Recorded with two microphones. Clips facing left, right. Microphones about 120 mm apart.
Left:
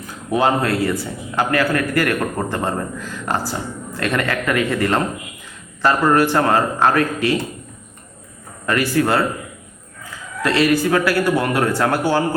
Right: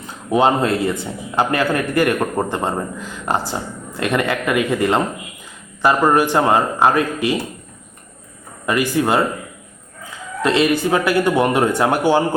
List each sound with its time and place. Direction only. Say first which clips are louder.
0.0 s a man's voice: right 2 dB; 25° right (ahead or behind)
8.6 s speech: even; 15° right (ahead or behind)
10.4 s a man's voice: even; 20° right (ahead or behind)